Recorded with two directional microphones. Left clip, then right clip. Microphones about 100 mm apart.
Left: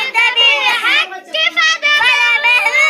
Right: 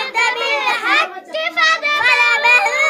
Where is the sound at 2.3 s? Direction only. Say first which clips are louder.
Left 1 dB; 35° right (ahead or behind).